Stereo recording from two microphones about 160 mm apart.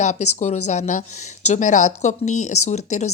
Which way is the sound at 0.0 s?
45° left (ahead or behind).